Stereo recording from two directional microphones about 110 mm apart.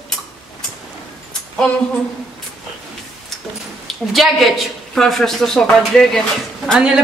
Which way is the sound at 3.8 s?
Centre (ahead or behind).